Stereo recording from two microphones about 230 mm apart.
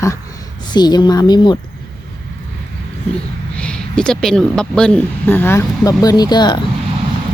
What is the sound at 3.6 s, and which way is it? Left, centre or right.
A woman's voice, centre.